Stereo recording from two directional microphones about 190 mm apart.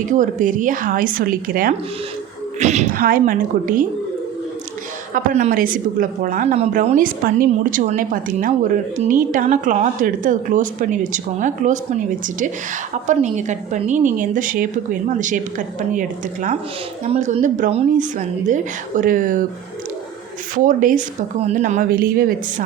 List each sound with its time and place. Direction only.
0.1 s a woman's voice: 40° right (ahead or behind)
2.6 s a woman's voice: 35° right (ahead or behind)
5.1 s a woman's voice: 40° right (ahead or behind)
13.1 s a woman's voice: 40° right (ahead or behind)
20.7 s a woman's voice: 45° right (ahead or behind)